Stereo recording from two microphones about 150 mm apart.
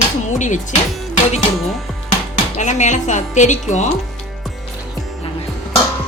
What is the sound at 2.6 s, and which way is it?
Speech, 50° left (ahead or behind).